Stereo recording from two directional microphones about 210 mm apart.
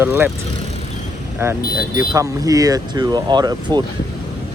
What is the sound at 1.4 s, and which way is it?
Speech, 10° right (ahead or behind).